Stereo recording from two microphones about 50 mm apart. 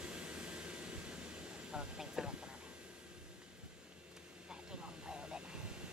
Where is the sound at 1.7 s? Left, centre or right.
Centre.